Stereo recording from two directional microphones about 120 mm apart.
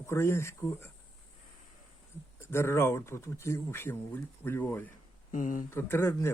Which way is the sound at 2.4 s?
20° left (ahead or behind).